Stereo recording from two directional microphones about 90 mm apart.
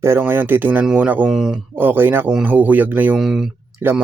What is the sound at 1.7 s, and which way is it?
Speech, 20° right (ahead or behind).